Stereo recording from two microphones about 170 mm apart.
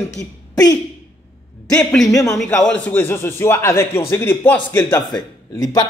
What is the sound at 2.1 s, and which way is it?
Speech, 20° left (ahead or behind).